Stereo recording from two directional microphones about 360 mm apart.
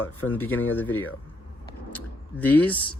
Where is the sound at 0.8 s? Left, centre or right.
Centre.